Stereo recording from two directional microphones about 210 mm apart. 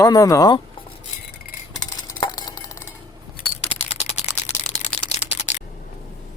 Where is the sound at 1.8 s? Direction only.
20° left (ahead or behind).